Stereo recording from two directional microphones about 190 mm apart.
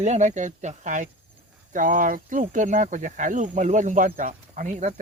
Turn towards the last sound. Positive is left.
turn(degrees=-40)  # may be behind; listen again after turning